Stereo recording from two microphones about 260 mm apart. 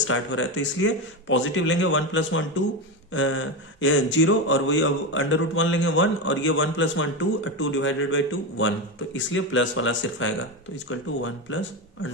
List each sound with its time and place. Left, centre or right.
0.0 s speech: left